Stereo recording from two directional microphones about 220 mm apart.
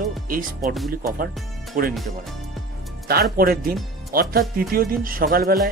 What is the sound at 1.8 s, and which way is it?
Speech, 40° right (ahead or behind).